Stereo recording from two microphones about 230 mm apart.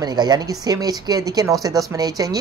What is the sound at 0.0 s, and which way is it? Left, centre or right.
Speech, centre.